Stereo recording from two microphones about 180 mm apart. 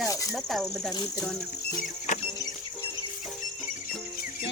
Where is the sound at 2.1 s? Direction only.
40° left (ahead or behind).